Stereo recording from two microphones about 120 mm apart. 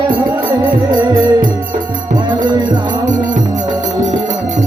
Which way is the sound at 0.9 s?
40° right (ahead or behind).